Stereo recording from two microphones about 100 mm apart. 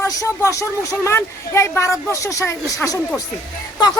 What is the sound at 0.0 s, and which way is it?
Speech, 30° left (ahead or behind).